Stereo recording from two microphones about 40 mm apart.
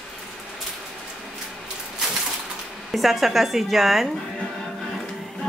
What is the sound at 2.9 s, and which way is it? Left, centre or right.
Speech, centre.